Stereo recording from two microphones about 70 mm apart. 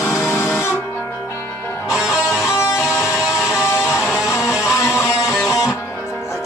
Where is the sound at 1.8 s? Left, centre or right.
Centre.